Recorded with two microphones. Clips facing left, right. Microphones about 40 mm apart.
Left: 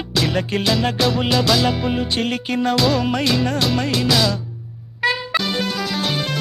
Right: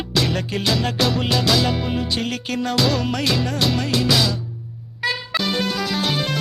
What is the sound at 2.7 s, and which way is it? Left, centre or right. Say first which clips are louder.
Music: left 1 dB; centre.